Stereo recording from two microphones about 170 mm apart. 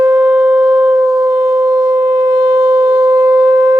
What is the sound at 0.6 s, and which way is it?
Sine wave, 20° right (ahead or behind).